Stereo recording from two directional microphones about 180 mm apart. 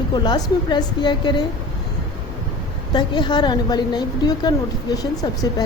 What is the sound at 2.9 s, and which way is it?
A woman's voice, 25° left (ahead or behind).